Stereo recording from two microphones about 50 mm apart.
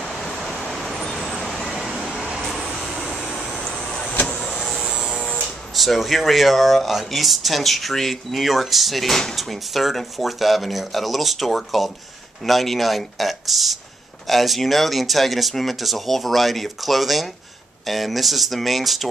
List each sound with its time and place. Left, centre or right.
0.0 s vehicle: centre
4.0 s vehicle: left
4.3 s power windows: centre
5.8 s speech: centre